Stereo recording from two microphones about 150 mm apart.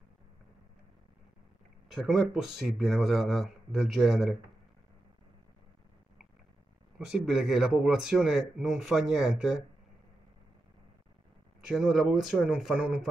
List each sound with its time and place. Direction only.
1.9 s speech: centre (ahead or behind)
7.0 s speech: 5° right (ahead or behind)
11.6 s speech: 5° right (ahead or behind)